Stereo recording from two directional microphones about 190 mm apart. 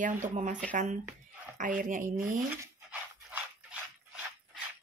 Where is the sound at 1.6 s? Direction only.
45° right (ahead or behind).